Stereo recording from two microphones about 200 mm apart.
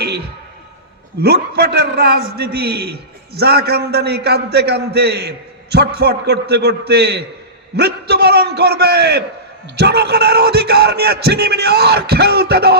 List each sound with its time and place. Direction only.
1.2 s a man's voice: 55° right (ahead or behind)